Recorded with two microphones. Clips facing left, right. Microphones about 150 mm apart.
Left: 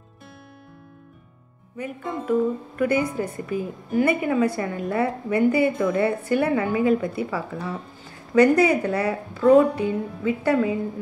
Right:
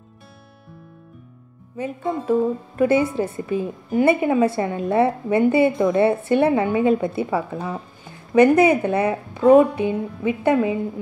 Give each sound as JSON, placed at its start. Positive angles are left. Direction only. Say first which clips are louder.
{"t": 1.8, "sound": "a woman's voice", "louder": "right 5 dB", "side_deg": -25}